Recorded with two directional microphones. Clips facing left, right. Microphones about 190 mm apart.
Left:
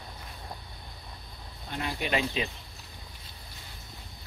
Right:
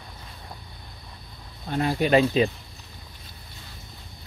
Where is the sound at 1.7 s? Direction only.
40° right (ahead or behind).